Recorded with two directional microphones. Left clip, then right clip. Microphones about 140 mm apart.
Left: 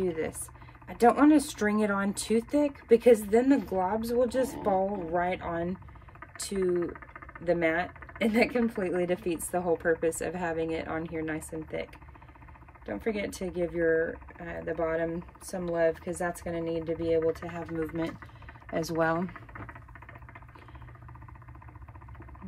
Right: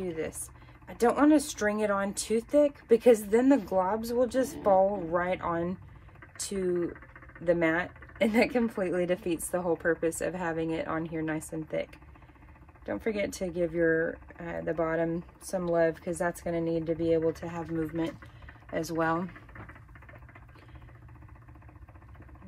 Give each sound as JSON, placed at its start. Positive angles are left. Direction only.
{"t": 0.0, "sound": "speech", "side_deg": 0}
{"t": 7.4, "sound": "speech", "side_deg": -20}
{"t": 18.7, "sound": "speech", "side_deg": 5}